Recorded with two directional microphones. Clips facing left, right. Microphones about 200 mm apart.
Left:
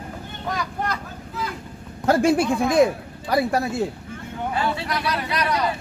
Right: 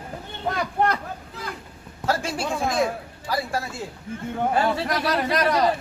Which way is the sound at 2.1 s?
55° left (ahead or behind).